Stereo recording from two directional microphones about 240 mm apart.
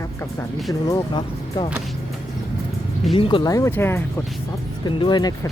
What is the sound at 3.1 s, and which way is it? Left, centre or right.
Speech, left.